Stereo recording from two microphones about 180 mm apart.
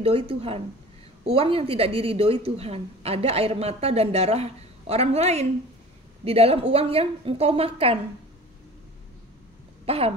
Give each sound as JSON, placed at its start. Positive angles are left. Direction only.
{"t": 0.0, "sound": "a woman's voice", "side_deg": -30}
{"t": 9.8, "sound": "cough", "side_deg": -35}